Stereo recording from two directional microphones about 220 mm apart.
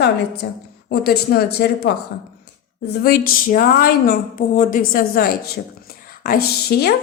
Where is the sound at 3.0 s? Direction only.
40° left (ahead or behind).